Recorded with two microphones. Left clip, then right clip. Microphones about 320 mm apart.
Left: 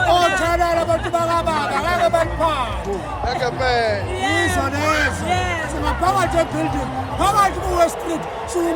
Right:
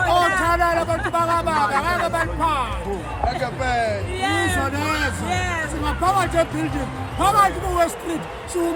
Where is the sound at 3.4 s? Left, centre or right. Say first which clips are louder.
Left 6 dB; right.